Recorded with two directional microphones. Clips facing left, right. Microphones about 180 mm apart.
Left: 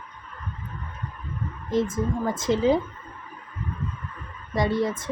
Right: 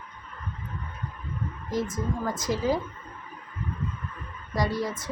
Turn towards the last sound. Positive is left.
turn(degrees=25)  # may be behind; listen again after turning